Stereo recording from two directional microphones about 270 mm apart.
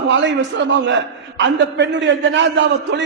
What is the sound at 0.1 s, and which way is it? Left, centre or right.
A man's voice, right.